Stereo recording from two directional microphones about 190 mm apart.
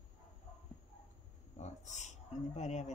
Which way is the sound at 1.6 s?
35° left (ahead or behind).